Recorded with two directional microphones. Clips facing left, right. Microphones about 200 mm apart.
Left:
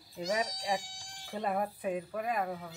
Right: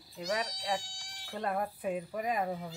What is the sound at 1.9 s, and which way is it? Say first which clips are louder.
Speech: even; 15° right (ahead or behind).